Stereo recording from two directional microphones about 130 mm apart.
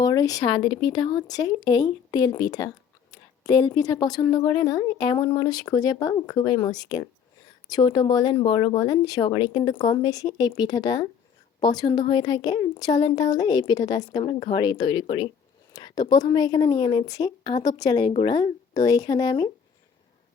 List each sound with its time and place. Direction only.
0.0 s speech: 25° left (ahead or behind)
0.4 s a woman's voice: 40° left (ahead or behind)
14.3 s speech: 50° left (ahead or behind)
15.7 s speech: 30° left (ahead or behind)